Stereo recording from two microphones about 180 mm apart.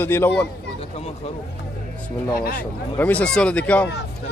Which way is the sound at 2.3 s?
50° left (ahead or behind).